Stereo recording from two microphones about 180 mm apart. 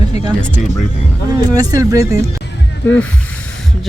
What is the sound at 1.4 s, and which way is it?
Speech, 20° right (ahead or behind).